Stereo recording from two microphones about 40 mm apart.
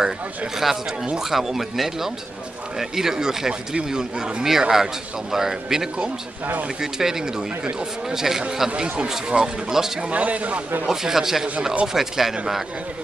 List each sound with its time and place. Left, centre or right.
0.6 s speech: centre
10.0 s a man's voice: right
10.9 s speech: centre